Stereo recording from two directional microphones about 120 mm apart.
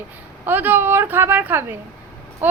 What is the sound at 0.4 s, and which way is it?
A woman's voice, 15° right (ahead or behind).